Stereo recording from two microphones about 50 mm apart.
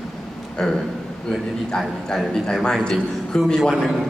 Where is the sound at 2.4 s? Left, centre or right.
Centre.